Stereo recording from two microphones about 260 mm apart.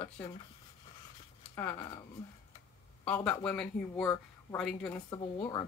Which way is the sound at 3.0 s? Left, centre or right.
Centre.